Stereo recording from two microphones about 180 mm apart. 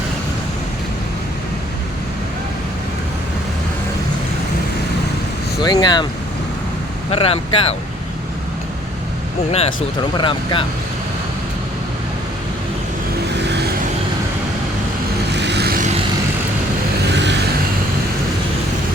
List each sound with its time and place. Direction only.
5.6 s speech: 25° left (ahead or behind)
7.1 s speech: 35° left (ahead or behind)
10.2 s speech: 25° left (ahead or behind)
15.3 s vehicle: 70° right (ahead or behind)